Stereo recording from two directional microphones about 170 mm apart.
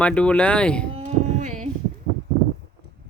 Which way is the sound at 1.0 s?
45° right (ahead or behind).